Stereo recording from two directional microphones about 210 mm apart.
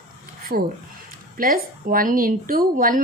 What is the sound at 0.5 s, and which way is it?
A woman's voice, 45° right (ahead or behind).